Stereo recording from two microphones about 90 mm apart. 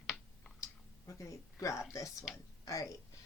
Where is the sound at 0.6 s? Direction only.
35° left (ahead or behind).